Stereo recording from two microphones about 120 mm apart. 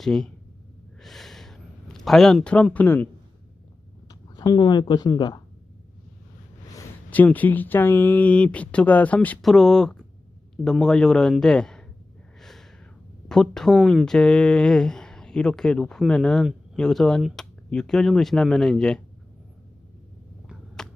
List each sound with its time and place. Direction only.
0.0 s speech: 5° left (ahead or behind)
1.0 s a sound: centre (ahead or behind)
4.1 s speech: 35° left (ahead or behind)
7.1 s speech: 15° left (ahead or behind)
9.4 s speech: centre (ahead or behind)
12.4 s snort: 5° left (ahead or behind)
13.2 s speech: 5° left (ahead or behind)
20.8 s a sound: 5° left (ahead or behind)